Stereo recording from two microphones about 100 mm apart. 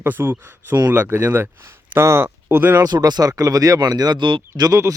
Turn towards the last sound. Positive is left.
turn(degrees=-35)  # may be behind; listen again after turning